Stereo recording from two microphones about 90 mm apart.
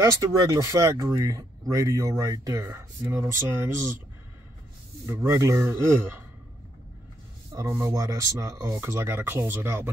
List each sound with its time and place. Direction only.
0.0 s speech: 45° right (ahead or behind)
5.0 s speech: 35° right (ahead or behind)
7.5 s speech: 35° right (ahead or behind)
8.6 s speech: 30° right (ahead or behind)